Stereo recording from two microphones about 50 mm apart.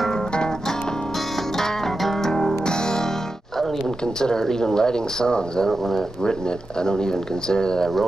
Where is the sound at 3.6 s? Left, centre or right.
Centre.